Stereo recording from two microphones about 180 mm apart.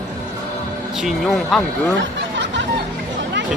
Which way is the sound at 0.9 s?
Centre (ahead or behind).